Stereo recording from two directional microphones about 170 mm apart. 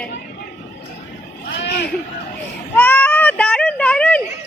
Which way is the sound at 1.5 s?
85° left.